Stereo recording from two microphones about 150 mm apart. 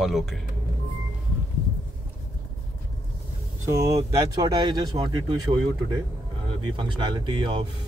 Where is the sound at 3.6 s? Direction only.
20° right (ahead or behind).